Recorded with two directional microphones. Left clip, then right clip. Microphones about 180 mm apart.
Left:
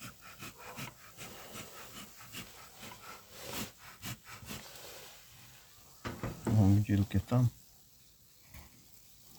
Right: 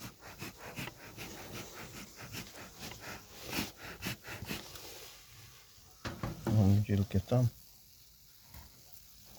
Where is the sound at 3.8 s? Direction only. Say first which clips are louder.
Right 5 dB; 50° right (ahead or behind).